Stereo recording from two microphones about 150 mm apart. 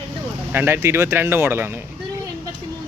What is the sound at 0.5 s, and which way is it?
Speech, 15° right (ahead or behind).